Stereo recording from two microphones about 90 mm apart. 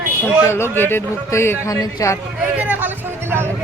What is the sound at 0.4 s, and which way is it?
A man's voice, 25° left (ahead or behind).